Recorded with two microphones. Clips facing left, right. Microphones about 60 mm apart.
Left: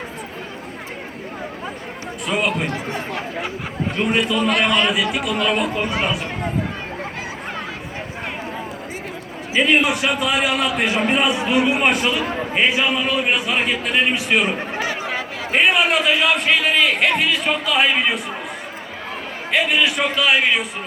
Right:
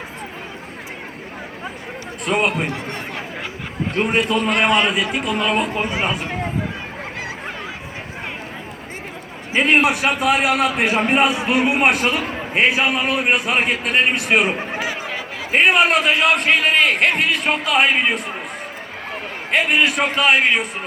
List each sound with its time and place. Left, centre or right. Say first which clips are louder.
2.3 s speech: right 3 dB; right
2.7 s chatter: left 2 dB; centre
3.9 s a man's voice: right 1 dB; right
4.5 s a man's voice: right 3 dB; centre
5.0 s speech: even; right
9.6 s a man's voice: right 1 dB; right
14.7 s chatter: left 1 dB; centre
15.5 s a man's voice: right 2 dB; right
19.5 s a man's voice: right 1 dB; right